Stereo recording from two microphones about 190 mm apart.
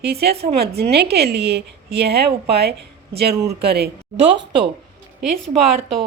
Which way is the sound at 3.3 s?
15° right (ahead or behind).